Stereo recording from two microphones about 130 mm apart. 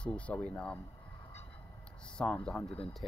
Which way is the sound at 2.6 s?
45° left (ahead or behind).